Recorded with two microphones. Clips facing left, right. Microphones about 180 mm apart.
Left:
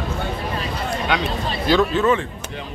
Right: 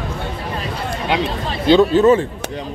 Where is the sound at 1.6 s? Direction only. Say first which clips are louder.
Right 6 dB; 25° right (ahead or behind).